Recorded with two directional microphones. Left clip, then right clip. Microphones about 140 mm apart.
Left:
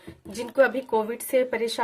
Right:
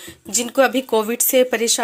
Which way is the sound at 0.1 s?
40° right (ahead or behind).